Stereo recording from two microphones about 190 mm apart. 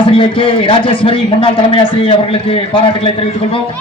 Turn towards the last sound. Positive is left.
turn(degrees=30)  # may be behind; listen again after turning